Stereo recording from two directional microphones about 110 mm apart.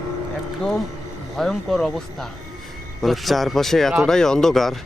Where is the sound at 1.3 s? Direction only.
5° left (ahead or behind).